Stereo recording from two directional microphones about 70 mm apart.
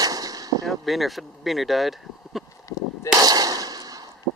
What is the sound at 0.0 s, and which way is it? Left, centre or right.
Gunshot, right.